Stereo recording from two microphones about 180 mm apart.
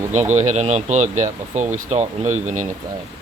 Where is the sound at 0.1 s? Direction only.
40° right (ahead or behind).